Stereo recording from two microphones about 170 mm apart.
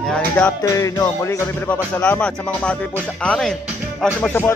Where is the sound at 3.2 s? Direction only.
5° left (ahead or behind).